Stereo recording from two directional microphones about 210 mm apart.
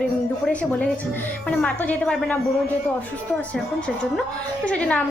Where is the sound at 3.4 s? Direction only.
5° left (ahead or behind).